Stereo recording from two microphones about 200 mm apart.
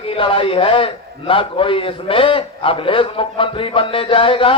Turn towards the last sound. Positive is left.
turn(degrees=25)  # may be behind; listen again after turning